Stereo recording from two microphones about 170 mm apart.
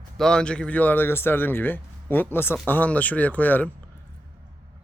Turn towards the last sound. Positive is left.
turn(degrees=10)  # may be behind; listen again after turning